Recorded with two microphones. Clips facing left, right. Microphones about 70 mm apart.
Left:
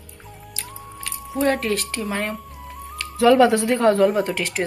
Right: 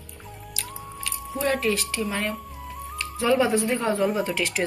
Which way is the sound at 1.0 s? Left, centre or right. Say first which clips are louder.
Left 5 dB; left.